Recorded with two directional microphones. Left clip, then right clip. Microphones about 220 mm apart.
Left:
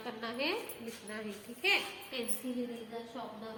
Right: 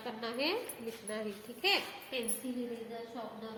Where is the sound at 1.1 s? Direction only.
25° right (ahead or behind).